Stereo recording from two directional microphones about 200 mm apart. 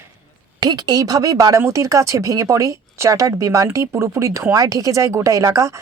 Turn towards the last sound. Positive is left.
turn(degrees=-15)  # may be behind; listen again after turning